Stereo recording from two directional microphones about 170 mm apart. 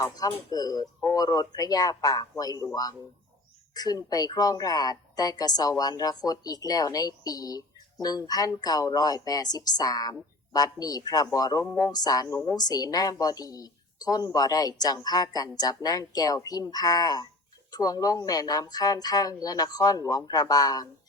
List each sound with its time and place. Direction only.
0.0 s a woman's voice: 20° left (ahead or behind)
3.8 s a woman's voice: 20° left (ahead or behind)
11.6 s speech: 10° left (ahead or behind)
11.9 s a woman's voice: 25° left (ahead or behind)